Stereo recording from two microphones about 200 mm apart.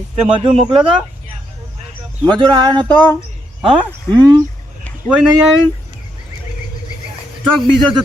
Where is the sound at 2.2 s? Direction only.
20° right (ahead or behind).